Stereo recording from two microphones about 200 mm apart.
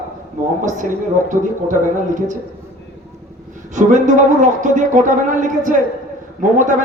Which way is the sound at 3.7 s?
40° right (ahead or behind).